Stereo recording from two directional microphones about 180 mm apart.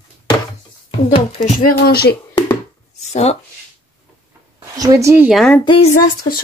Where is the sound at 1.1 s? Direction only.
35° left (ahead or behind).